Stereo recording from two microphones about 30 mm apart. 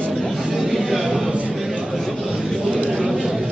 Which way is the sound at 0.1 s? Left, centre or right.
Centre.